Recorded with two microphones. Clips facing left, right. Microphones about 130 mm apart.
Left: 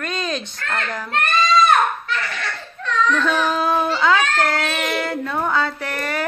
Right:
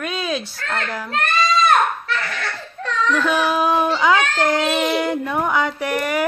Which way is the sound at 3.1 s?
10° right (ahead or behind).